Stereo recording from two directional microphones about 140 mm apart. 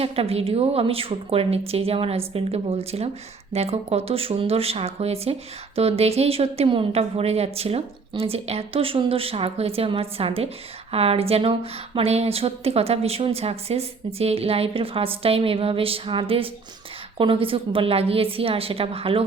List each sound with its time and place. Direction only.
0.0 s a woman's voice: 45° right (ahead or behind)